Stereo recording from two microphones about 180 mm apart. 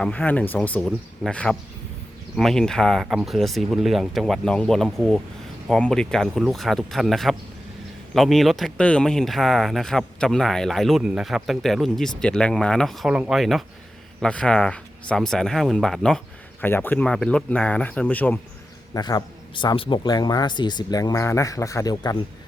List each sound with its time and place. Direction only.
0.0 s speech: 10° left (ahead or behind)
18.9 s speech: 20° left (ahead or behind)